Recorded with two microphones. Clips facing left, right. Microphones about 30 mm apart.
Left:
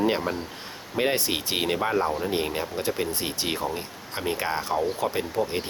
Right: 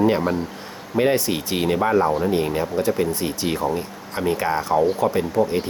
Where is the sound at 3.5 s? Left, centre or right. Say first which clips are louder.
Right 6 dB; centre.